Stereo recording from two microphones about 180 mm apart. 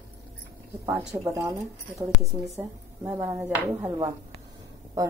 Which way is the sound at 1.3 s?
15° right (ahead or behind).